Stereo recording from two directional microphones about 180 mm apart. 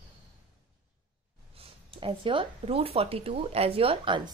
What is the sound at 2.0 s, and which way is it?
A woman's voice, 30° right (ahead or behind).